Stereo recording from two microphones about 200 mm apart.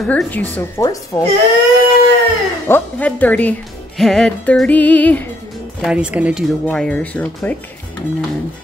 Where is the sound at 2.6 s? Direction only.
10° left (ahead or behind).